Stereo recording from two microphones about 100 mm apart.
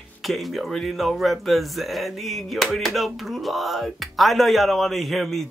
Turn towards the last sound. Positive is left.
turn(degrees=0)  # may be behind; listen again after turning